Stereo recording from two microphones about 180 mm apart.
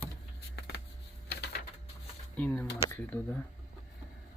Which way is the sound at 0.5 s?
65° left (ahead or behind).